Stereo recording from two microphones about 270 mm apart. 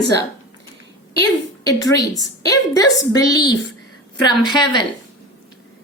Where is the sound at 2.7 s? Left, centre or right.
Centre.